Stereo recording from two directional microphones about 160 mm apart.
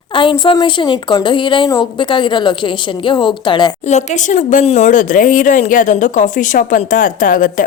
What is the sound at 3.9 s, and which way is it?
Speech, 45° left (ahead or behind).